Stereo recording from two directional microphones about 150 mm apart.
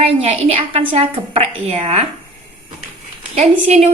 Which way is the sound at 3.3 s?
45° right (ahead or behind).